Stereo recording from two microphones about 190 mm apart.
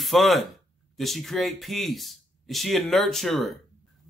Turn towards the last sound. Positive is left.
turn(degrees=0)  # may be behind; listen again after turning